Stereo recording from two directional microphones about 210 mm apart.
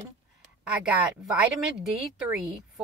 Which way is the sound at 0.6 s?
5° right (ahead or behind).